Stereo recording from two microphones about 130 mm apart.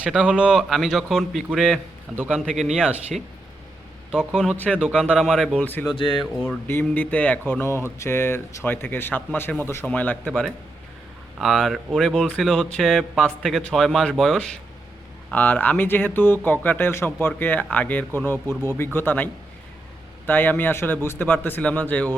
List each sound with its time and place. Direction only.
0.0 s speech: 10° right (ahead or behind)
4.1 s speech: 5° right (ahead or behind)
4.5 s speech: 10° left (ahead or behind)
4.8 s speech: 5° right (ahead or behind); by 5.9 s 10° left (ahead or behind)
6.0 s speech: 40° left (ahead or behind)
6.4 s speech: 15° left (ahead or behind)
11.3 s speech: centre (ahead or behind)